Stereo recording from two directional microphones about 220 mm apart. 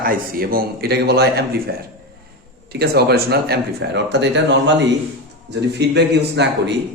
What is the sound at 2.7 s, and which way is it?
A man's voice, 45° right (ahead or behind).